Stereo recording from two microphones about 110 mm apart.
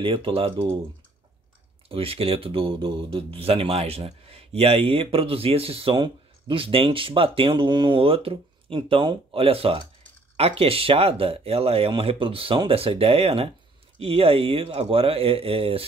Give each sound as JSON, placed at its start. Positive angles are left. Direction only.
{"t": 0.0, "sound": "speech", "side_deg": -50}
{"t": 1.9, "sound": "speech", "side_deg": -60}
{"t": 6.0, "sound": "speech", "side_deg": -50}